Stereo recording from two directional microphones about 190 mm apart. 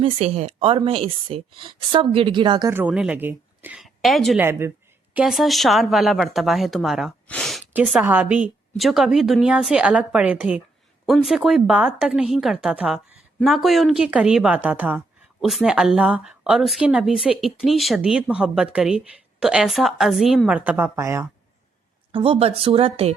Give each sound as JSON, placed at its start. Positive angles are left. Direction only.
{"t": 0.0, "sound": "a woman's voice", "side_deg": -35}
{"t": 2.6, "sound": "a woman's voice", "side_deg": -10}
{"t": 4.4, "sound": "a woman's voice", "side_deg": -15}
{"t": 5.1, "sound": "a woman's voice", "side_deg": 0}
{"t": 7.7, "sound": "a woman's voice", "side_deg": -5}
{"t": 22.1, "sound": "a woman's voice", "side_deg": -25}